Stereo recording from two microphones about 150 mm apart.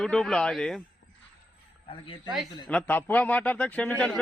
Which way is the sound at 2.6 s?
10° left (ahead or behind).